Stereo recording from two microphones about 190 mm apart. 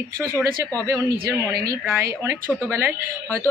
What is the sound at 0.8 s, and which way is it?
Speech, 20° right (ahead or behind).